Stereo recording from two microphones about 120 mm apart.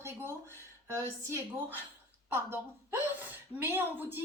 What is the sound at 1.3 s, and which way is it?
Speech, 20° right (ahead or behind).